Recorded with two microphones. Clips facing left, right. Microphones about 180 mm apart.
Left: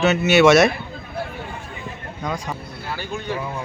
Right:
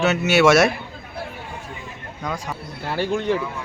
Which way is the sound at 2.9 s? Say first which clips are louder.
Right 10 dB; 75° right (ahead or behind).